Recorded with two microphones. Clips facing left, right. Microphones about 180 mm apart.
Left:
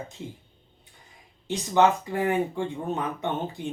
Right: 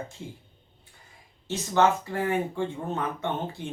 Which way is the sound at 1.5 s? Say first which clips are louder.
Left 2 dB; 15° left (ahead or behind).